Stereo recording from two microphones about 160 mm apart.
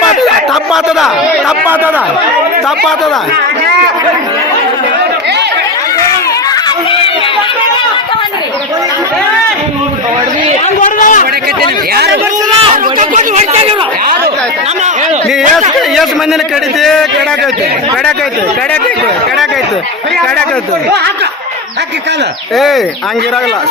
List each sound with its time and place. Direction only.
0.7 s speech: centre (ahead or behind)
10.8 s a man's voice: 55° left (ahead or behind)
12.7 s a sound: 50° right (ahead or behind)
16.8 s a man's voice: centre (ahead or behind)
22.5 s a man's voice: centre (ahead or behind)